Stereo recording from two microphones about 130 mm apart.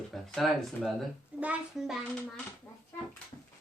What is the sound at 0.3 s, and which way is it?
Speech, centre (ahead or behind).